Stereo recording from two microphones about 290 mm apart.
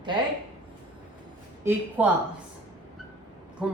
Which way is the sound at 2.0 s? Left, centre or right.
Centre.